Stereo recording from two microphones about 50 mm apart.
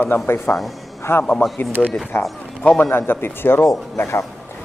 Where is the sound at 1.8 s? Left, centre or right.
Left.